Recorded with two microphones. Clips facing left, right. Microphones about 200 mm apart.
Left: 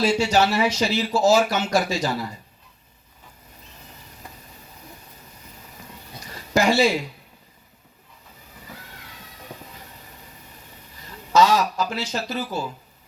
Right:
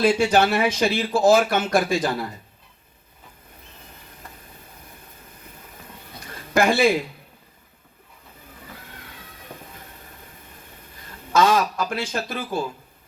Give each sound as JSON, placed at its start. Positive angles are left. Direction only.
{"t": 0.0, "sound": "speech", "side_deg": -55}
{"t": 6.2, "sound": "a sound", "side_deg": -55}
{"t": 11.3, "sound": "speech", "side_deg": -55}